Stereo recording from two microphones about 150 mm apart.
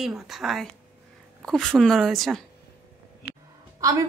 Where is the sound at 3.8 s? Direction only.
20° right (ahead or behind).